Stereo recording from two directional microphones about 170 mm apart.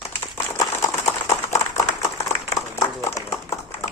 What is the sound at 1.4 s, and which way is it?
Clapping, 15° left (ahead or behind).